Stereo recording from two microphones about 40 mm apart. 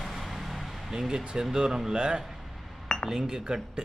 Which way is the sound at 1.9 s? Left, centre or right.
Right.